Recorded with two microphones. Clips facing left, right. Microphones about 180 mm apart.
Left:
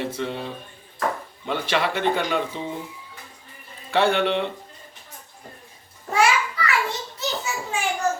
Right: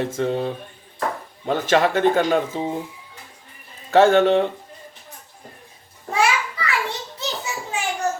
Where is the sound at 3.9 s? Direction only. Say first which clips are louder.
Right 6 dB; 45° right (ahead or behind).